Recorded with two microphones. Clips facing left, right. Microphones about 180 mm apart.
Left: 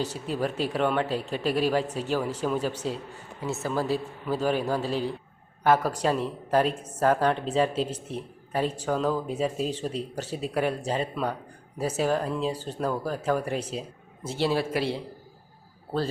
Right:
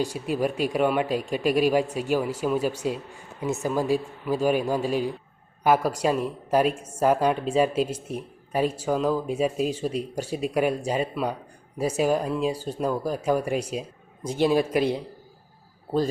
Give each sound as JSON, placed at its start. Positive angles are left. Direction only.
{"t": 0.0, "sound": "a woman's voice", "side_deg": -10}